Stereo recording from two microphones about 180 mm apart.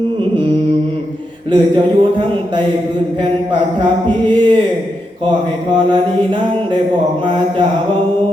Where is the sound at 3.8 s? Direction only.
25° right (ahead or behind).